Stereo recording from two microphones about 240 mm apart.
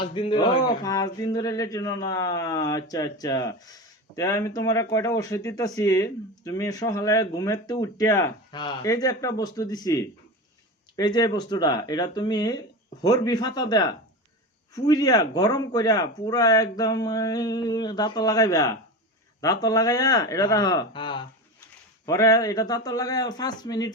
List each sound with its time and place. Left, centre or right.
0.0 s speech: left